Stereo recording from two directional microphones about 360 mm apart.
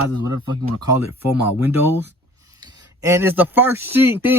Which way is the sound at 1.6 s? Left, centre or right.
Centre.